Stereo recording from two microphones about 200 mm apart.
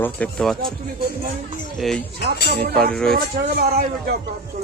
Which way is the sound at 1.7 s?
Centre (ahead or behind).